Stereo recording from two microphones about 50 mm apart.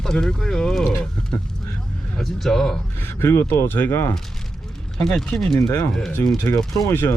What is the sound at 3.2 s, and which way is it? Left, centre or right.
Speech, left.